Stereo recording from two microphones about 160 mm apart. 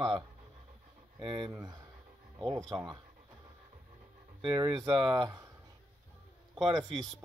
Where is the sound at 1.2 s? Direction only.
30° right (ahead or behind).